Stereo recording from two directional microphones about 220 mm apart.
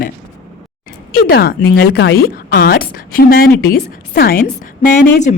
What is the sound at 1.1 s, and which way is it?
A woman's voice, 45° left (ahead or behind).